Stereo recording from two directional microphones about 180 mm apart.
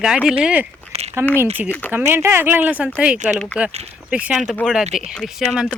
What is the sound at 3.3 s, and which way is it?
Speech, centre (ahead or behind).